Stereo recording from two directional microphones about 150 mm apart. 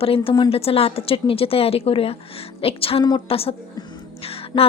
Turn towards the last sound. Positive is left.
turn(degrees=40)  # may be behind; listen again after turning